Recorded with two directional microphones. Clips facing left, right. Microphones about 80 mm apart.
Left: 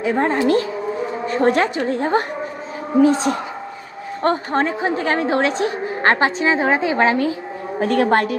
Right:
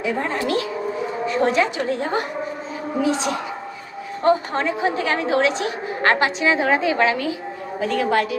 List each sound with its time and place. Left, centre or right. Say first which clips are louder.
0.0 s a woman's voice: left 5 dB; left
7.8 s a woman's voice: left 4 dB; left